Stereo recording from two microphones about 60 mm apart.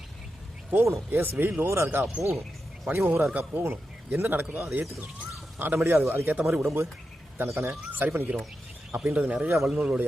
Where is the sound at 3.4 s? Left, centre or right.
Right.